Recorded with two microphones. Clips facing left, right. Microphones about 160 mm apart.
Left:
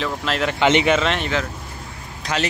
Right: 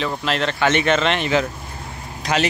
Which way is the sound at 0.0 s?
Centre (ahead or behind).